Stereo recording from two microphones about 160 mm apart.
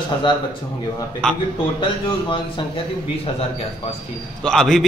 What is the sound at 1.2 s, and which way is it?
Speech, 5° left (ahead or behind).